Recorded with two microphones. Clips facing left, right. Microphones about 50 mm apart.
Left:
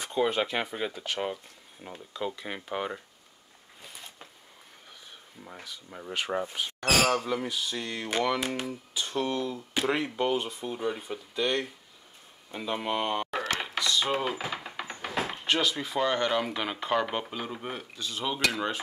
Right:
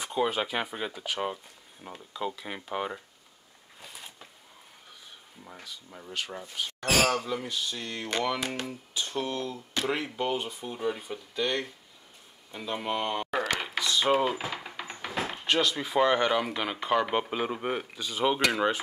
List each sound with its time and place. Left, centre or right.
0.0 s speech: centre
3.8 s a sound: centre
5.4 s speech: centre
7.1 s speech: centre
13.3 s a sound: centre
13.7 s mechanisms: centre
14.2 s speech: centre
14.5 s a sound: centre
15.0 s door: centre
16.0 s speech: centre
17.3 s speech: right
18.2 s speech: centre